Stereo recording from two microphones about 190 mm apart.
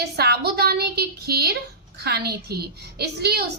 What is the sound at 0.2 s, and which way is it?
A woman's voice, 55° right (ahead or behind).